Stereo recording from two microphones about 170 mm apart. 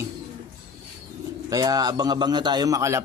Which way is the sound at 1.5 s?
20° right (ahead or behind).